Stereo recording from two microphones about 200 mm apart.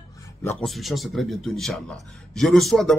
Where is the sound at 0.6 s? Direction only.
Centre (ahead or behind).